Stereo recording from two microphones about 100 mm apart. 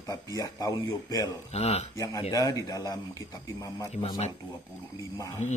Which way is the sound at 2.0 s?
35° left (ahead or behind).